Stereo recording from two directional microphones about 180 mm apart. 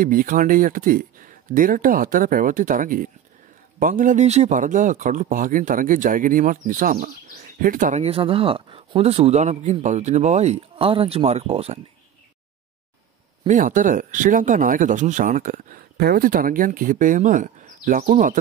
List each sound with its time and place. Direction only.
0.0 s speech: 50° right (ahead or behind); by 11.8 s 35° right (ahead or behind)
13.5 s speech: 45° right (ahead or behind)